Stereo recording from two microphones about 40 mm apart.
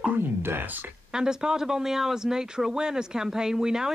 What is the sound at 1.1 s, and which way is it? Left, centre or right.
Speech, centre.